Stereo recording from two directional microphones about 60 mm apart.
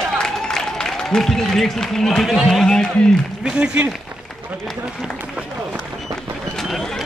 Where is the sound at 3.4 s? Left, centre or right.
Centre.